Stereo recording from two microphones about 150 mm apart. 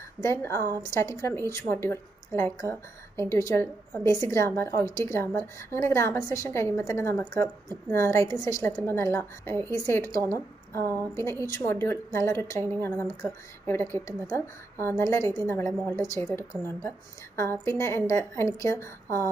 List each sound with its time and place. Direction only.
0.2 s a woman's voice: 15° left (ahead or behind)
10.8 s a woman's voice: 20° right (ahead or behind)
11.5 s a woman's voice: 20° left (ahead or behind)